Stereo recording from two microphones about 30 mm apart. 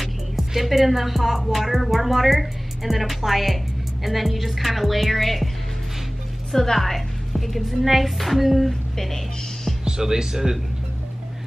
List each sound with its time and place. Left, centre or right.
0.5 s speech: centre
6.5 s speech: centre
8.9 s speech: centre
9.8 s speech: right